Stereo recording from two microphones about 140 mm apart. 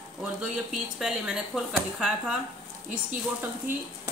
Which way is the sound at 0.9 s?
5° right (ahead or behind).